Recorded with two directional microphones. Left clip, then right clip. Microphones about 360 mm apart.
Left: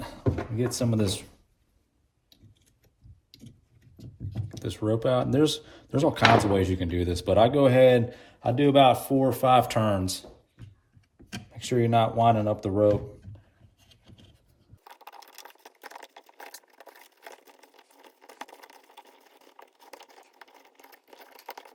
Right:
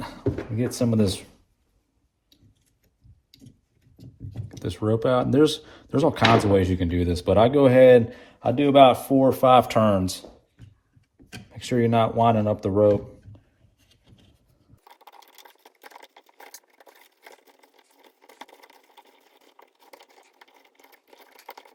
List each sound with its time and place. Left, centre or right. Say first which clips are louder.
0.0 s beatboxing: right 2 dB; centre
4.6 s speech: right 3 dB; centre
11.5 s speech: right 2 dB; centre
13.8 s wood: left 2 dB; centre
14.8 s a sound: left 2 dB; centre